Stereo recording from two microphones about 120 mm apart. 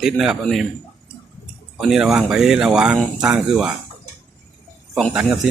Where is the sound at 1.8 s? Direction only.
5° right (ahead or behind).